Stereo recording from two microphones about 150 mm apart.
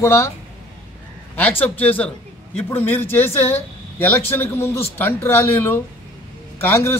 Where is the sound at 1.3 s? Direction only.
10° left (ahead or behind).